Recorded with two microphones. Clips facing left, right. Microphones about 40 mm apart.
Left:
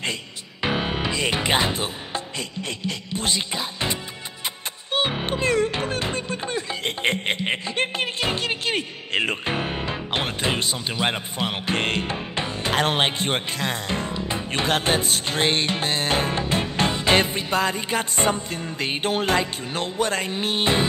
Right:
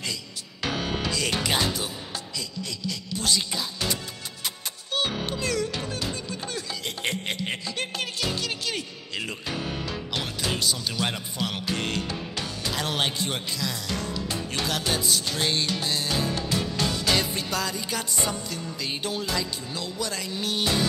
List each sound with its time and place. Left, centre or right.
0.6 s speech: left
4.9 s music: left